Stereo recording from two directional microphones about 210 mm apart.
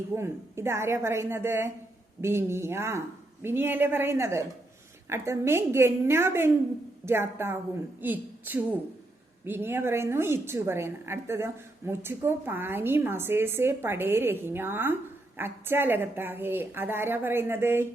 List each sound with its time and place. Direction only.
0.1 s a woman's voice: 10° right (ahead or behind)